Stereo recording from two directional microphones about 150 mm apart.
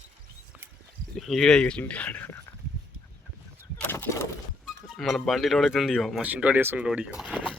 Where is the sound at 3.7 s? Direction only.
10° left (ahead or behind).